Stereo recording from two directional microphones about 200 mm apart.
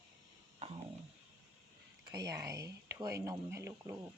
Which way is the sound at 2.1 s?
15° right (ahead or behind).